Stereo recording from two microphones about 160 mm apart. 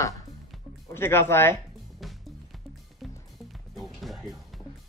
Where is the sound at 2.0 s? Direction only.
Centre (ahead or behind).